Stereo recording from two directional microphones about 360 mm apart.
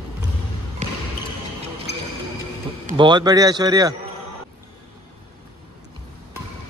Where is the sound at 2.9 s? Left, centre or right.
Centre.